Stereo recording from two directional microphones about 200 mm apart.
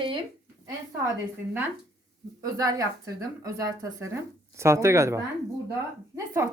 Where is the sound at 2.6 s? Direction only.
15° right (ahead or behind).